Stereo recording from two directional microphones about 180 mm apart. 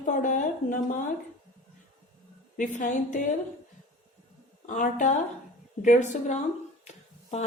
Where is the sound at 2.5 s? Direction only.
45° left (ahead or behind).